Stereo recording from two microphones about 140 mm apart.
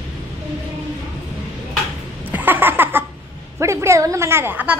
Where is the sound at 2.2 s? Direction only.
15° right (ahead or behind).